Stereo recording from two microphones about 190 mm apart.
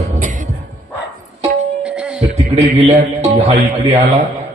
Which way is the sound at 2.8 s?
35° right (ahead or behind).